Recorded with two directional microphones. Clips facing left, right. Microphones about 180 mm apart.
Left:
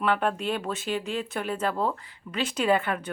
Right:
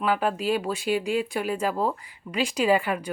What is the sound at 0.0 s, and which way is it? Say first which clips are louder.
Speech: right 1 dB; 5° right (ahead or behind).